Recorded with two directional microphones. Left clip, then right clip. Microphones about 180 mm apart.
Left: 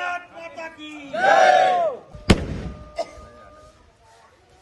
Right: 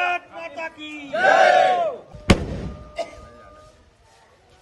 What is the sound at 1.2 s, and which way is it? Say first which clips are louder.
Battle cry: even; centre (ahead or behind).